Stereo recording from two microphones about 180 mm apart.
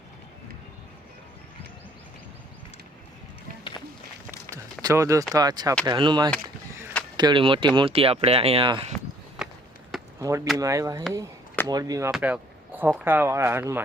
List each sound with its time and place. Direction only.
4.5 s a sound: 20° right (ahead or behind)
5.3 s speech: 20° right (ahead or behind)
9.4 s walk: 5° right (ahead or behind)
10.2 s speech: 15° right (ahead or behind)